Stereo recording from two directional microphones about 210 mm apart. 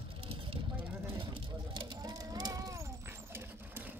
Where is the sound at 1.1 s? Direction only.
25° right (ahead or behind).